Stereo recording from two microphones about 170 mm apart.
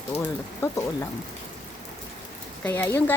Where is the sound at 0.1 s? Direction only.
40° left (ahead or behind).